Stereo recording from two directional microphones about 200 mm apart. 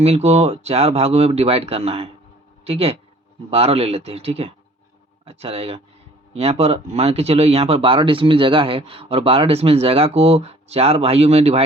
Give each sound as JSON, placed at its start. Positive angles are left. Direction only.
{"t": 0.0, "sound": "speech", "side_deg": -30}